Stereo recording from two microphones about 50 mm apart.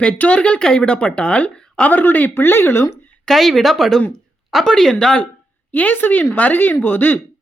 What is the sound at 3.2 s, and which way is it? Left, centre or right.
Speech, centre.